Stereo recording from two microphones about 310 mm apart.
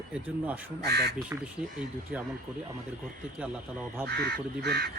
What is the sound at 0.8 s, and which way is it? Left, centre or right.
Speech, right.